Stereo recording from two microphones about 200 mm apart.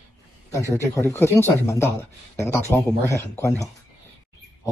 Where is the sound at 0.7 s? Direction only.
15° left (ahead or behind).